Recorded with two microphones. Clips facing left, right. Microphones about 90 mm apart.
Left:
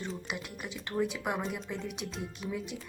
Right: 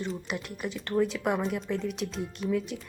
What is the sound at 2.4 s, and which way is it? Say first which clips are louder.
Speech: right 9 dB; 60° right (ahead or behind).